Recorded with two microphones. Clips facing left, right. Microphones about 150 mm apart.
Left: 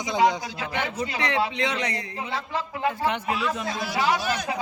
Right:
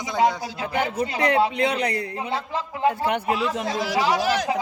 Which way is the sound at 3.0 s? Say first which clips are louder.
Right 3 dB; 45° right (ahead or behind).